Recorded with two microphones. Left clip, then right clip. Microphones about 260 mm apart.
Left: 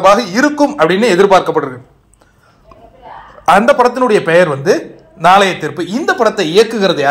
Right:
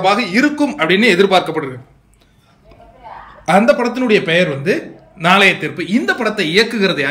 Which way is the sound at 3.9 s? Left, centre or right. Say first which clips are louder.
Left 4 dB; centre.